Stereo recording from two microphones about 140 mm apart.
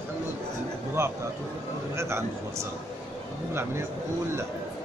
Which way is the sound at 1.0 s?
20° right (ahead or behind).